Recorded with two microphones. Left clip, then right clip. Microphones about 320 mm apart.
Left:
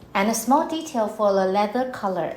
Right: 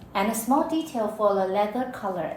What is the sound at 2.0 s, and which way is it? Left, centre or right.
Speech, left.